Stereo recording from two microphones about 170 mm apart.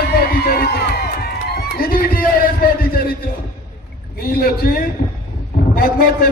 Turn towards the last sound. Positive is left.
turn(degrees=60)  # may be behind; listen again after turning